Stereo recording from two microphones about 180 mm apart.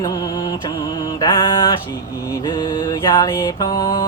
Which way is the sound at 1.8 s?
20° left (ahead or behind).